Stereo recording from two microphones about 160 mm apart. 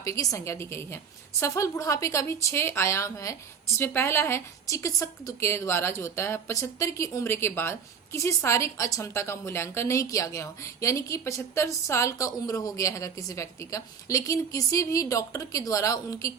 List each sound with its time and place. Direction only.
0.0 s a woman's voice: 20° left (ahead or behind)